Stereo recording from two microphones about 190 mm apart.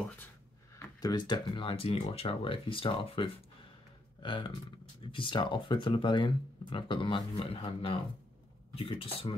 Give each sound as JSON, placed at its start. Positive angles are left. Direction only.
{"t": 0.7, "sound": "speech", "side_deg": 20}